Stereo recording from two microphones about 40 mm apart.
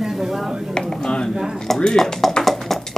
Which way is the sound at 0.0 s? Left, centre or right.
Centre.